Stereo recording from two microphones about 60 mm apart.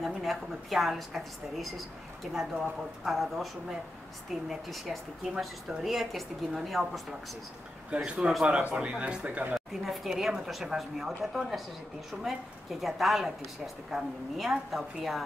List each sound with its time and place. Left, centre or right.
0.0 s a woman's voice: centre
2.5 s speech: centre
3.1 s a woman's voice: centre
4.5 s a woman's voice: centre
7.9 s speech: centre
9.7 s a woman's voice: centre